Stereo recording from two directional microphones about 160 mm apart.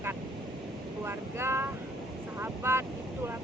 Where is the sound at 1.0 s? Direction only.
15° right (ahead or behind).